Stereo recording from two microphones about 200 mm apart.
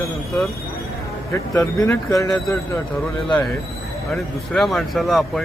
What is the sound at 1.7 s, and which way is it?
Speech, 15° left (ahead or behind).